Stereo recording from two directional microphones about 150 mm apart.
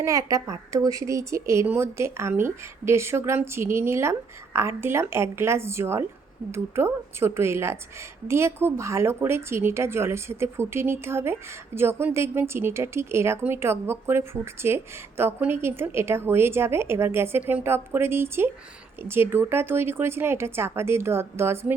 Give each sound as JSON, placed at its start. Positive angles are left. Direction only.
{"t": 0.0, "sound": "a woman's voice", "side_deg": -20}